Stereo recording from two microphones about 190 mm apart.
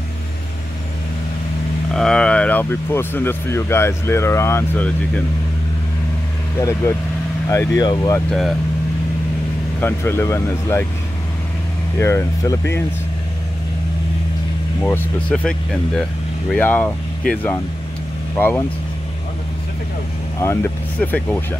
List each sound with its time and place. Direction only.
2.0 s speech: 5° left (ahead or behind)
6.6 s speech: 15° left (ahead or behind)
8.3 s speech: centre (ahead or behind)
9.8 s speech: 10° left (ahead or behind)
12.0 s speech: 15° left (ahead or behind)
14.8 s speech: 10° left (ahead or behind)
21.0 s speech: 10° left (ahead or behind)